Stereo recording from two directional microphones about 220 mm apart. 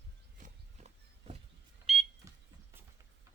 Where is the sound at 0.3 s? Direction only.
35° right (ahead or behind).